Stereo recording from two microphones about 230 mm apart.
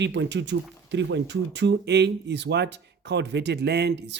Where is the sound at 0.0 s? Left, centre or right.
Right.